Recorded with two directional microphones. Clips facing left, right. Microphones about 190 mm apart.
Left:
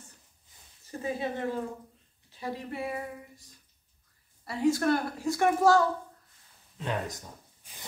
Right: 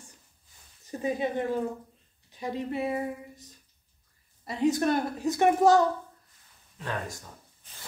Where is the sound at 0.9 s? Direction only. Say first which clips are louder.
Right 4 dB; 20° right (ahead or behind).